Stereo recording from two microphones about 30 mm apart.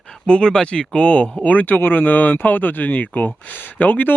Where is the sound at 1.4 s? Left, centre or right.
Left.